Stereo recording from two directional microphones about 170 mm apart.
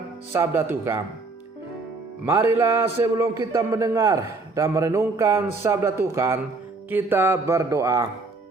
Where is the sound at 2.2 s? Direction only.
15° right (ahead or behind).